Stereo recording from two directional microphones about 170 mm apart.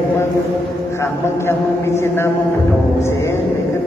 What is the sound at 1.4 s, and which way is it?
Speech, 15° left (ahead or behind).